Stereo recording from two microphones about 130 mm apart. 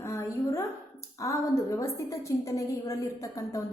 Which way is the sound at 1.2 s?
25° left (ahead or behind).